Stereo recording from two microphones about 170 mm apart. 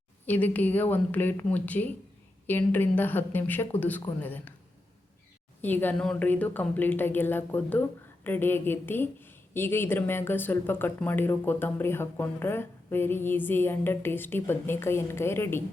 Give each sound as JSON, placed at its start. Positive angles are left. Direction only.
{"t": 0.3, "sound": "speech", "side_deg": 10}
{"t": 5.6, "sound": "speech", "side_deg": 10}